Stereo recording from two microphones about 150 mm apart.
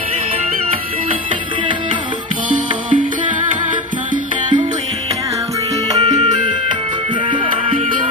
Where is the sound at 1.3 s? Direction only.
35° right (ahead or behind).